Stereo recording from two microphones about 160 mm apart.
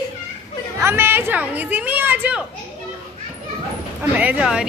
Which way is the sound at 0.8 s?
15° right (ahead or behind).